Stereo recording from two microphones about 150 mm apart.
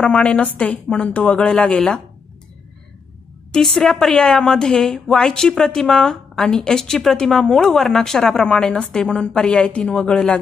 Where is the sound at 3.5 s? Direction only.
5° left (ahead or behind).